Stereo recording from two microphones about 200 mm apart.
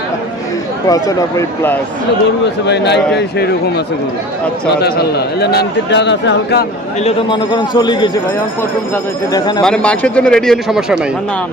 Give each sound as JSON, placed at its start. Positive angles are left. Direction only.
{"t": 0.9, "sound": "speech", "side_deg": 20}
{"t": 2.6, "sound": "a man's voice", "side_deg": 60}
{"t": 4.8, "sound": "a man's voice", "side_deg": 55}
{"t": 7.0, "sound": "a man's voice", "side_deg": 25}
{"t": 9.3, "sound": "a man's voice", "side_deg": 20}
{"t": 9.6, "sound": "a man's voice", "side_deg": 5}